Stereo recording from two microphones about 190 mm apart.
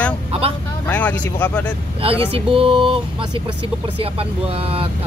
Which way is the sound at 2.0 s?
30° right (ahead or behind).